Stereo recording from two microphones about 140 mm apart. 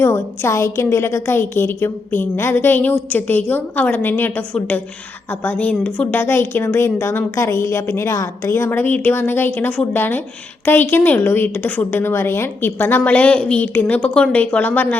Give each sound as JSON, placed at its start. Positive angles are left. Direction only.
{"t": 0.0, "sound": "a woman's voice", "side_deg": 20}